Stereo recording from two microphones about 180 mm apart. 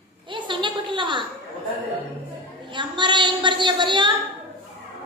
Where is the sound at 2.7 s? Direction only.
25° right (ahead or behind).